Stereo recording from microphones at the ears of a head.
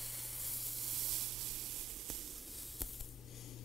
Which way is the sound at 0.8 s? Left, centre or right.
Right.